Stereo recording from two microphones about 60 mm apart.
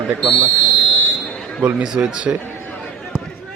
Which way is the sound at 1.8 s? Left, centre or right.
Centre.